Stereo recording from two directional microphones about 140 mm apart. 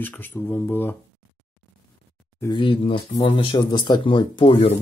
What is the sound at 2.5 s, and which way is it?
Speech, 40° left (ahead or behind).